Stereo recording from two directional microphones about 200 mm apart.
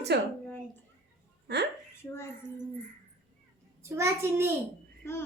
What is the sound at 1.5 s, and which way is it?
Speech, 55° right (ahead or behind).